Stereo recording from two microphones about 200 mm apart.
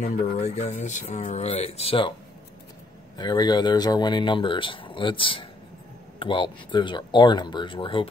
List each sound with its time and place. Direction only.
0.0 s speech: 35° left (ahead or behind)
3.2 s speech: 20° left (ahead or behind)